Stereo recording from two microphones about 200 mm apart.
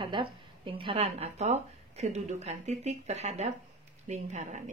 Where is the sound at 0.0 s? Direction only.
25° right (ahead or behind).